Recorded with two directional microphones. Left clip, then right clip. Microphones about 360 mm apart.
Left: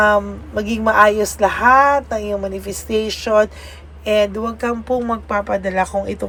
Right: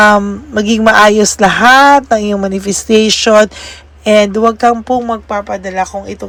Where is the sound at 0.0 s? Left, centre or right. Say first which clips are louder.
Right 7 dB; right.